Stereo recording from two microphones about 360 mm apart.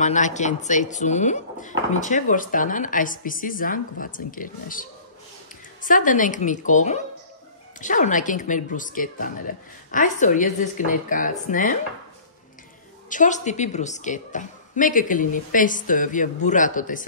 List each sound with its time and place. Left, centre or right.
0.0 s speech: centre
13.1 s speech: left